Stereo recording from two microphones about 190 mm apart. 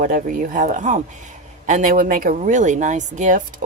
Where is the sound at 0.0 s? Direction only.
45° right (ahead or behind).